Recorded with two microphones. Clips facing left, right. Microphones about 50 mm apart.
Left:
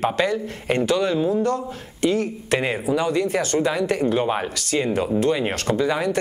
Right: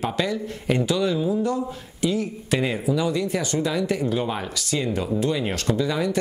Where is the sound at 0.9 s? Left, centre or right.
Left.